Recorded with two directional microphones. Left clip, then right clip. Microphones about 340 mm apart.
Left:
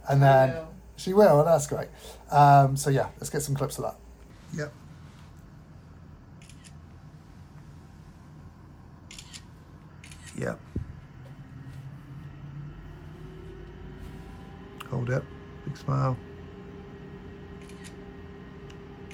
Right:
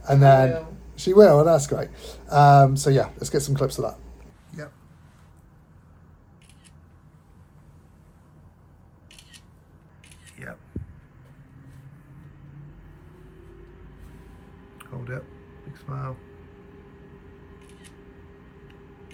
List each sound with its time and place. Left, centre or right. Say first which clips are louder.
0.0 s speech: right 4 dB; centre
10.4 s speech: left 7 dB; left
14.8 s a sound: left 6 dB; centre
15.7 s speech: left 7 dB; centre